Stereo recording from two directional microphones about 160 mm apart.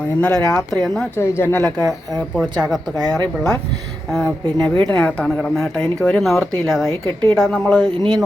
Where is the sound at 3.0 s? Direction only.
25° right (ahead or behind).